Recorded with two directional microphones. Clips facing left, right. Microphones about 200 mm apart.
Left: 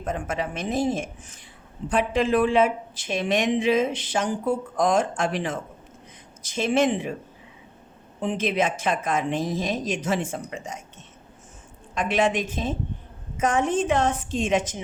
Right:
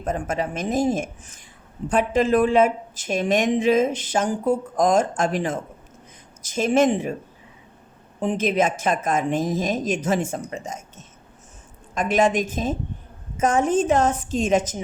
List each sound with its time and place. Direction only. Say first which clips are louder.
0.0 s speech: right 3 dB; 45° right (ahead or behind)
8.2 s speech: right 3 dB; 45° right (ahead or behind)